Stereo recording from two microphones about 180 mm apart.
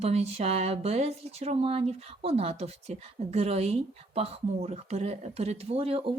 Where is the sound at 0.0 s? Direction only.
35° right (ahead or behind).